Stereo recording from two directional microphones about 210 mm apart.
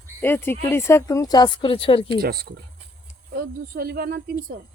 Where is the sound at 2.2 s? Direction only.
45° right (ahead or behind).